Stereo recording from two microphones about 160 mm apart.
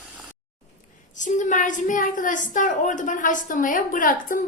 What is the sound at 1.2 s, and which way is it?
A woman's voice, 50° left (ahead or behind).